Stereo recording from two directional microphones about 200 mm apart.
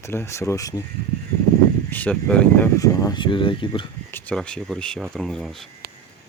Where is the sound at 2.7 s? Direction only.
15° left (ahead or behind).